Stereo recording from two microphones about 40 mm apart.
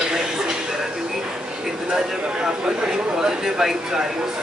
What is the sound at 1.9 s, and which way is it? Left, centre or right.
Speech, centre.